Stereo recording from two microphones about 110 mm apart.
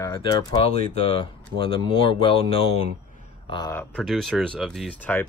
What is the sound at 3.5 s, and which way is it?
Speech, 45° left (ahead or behind).